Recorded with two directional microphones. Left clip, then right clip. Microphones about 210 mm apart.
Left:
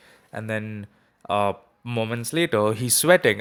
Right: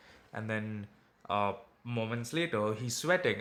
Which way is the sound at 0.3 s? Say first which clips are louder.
Left 8 dB; 35° left (ahead or behind).